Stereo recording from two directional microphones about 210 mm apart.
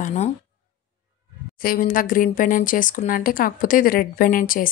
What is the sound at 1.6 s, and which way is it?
Speech, 40° left (ahead or behind).